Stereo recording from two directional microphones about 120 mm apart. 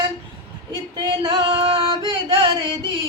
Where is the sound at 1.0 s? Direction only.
40° right (ahead or behind).